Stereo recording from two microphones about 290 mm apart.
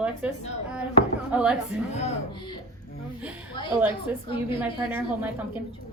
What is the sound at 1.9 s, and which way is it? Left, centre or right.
Speech, left.